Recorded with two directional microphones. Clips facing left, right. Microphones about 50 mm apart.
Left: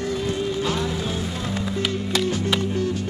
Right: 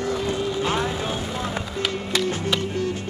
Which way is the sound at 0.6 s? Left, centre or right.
Right.